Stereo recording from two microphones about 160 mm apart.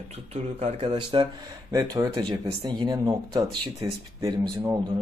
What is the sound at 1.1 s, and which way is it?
Speech, 30° right (ahead or behind).